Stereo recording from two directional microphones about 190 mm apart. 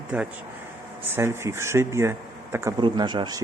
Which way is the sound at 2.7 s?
25° right (ahead or behind).